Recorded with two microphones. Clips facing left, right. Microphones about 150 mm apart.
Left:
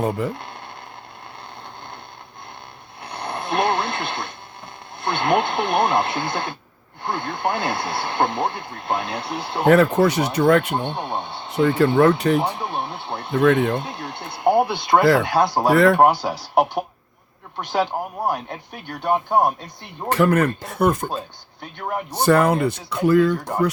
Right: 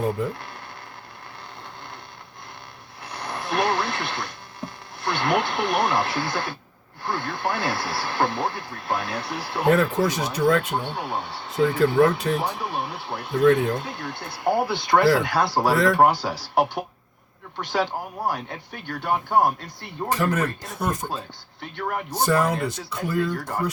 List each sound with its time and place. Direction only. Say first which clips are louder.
3.0 s radio: left 3 dB; 25° left (ahead or behind)
4.9 s speech: left 3 dB; 25° left (ahead or behind)
9.6 s speech: left 5 dB; 70° left (ahead or behind)
10.8 s speech: left 3 dB; 20° left (ahead or behind)
11.5 s speech: left 2 dB; 65° left (ahead or behind)
12.4 s speech: left 3 dB; 20° left (ahead or behind)
13.3 s speech: left 1 dB; 70° left (ahead or behind)
13.7 s speech: left 3 dB; 20° left (ahead or behind)
15.7 s speech: left 7 dB; 65° left (ahead or behind)
16.0 s speech: left 2 dB; 20° left (ahead or behind)
20.1 s speech: left 6 dB; 60° left (ahead or behind)
22.1 s speech: left 6 dB; 65° left (ahead or behind)